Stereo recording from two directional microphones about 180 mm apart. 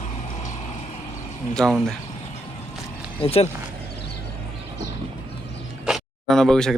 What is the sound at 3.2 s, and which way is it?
Speech, 35° left (ahead or behind).